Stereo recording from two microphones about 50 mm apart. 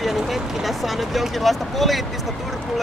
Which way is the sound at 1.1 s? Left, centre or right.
Centre.